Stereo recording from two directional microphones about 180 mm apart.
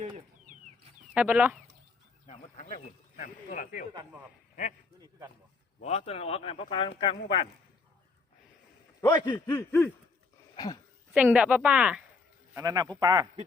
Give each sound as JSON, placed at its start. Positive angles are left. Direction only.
{"t": 1.1, "sound": "speech", "side_deg": -5}
{"t": 2.2, "sound": "a sound", "side_deg": 35}
{"t": 2.8, "sound": "speech", "side_deg": 45}
{"t": 5.8, "sound": "speech", "side_deg": 35}
{"t": 9.0, "sound": "a man's voice", "side_deg": 20}
{"t": 9.5, "sound": "a sound", "side_deg": 10}
{"t": 10.5, "sound": "a sound", "side_deg": 25}
{"t": 11.1, "sound": "a woman's voice", "side_deg": -5}
{"t": 12.5, "sound": "speech", "side_deg": -20}